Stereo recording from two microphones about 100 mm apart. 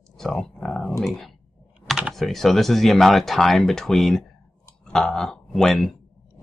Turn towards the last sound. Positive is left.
turn(degrees=0)  # may be behind; listen again after turning